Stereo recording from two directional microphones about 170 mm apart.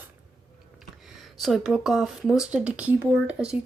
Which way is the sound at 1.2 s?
Centre (ahead or behind).